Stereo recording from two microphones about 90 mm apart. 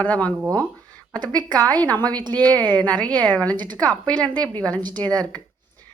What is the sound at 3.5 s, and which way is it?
Speech, 55° right (ahead or behind).